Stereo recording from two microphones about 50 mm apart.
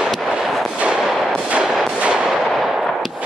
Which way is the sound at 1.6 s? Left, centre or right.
Centre.